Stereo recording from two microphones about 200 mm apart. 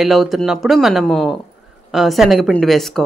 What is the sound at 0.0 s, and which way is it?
Speech, centre (ahead or behind).